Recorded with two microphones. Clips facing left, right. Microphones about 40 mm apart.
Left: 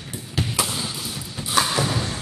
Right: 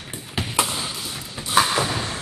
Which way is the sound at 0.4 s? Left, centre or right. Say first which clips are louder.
Right 1 dB; centre.